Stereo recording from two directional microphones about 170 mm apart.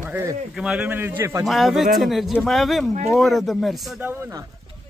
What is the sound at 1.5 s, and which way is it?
Speech, centre (ahead or behind).